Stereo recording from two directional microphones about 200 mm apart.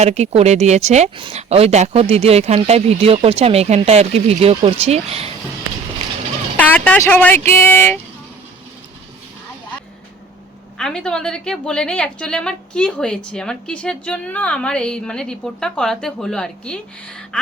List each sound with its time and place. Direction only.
0.0 s speech: 35° right (ahead or behind)
6.6 s speech: 5° left (ahead or behind)
10.8 s a woman's voice: 5° left (ahead or behind)